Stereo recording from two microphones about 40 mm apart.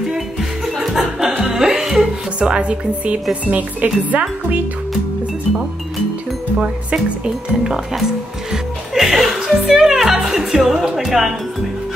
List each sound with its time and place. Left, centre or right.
0.1 s music: centre
2.5 s speech: right
3.4 s speech: right
6.6 s speech: centre
7.9 s music: centre